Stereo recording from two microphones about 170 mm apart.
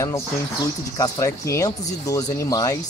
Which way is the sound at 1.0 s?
20° left (ahead or behind).